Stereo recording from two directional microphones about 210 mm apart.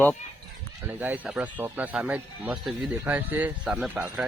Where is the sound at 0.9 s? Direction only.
10° right (ahead or behind).